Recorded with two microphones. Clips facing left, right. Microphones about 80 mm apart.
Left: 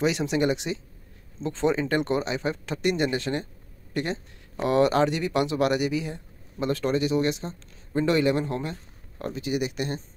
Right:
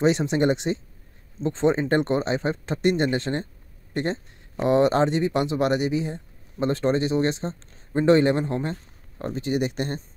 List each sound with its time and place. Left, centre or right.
0.0 s speech: right